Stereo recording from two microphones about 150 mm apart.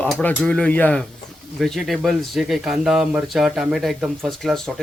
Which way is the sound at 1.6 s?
Centre (ahead or behind).